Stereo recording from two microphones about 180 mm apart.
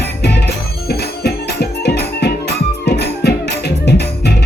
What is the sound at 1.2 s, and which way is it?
Music, 65° left (ahead or behind).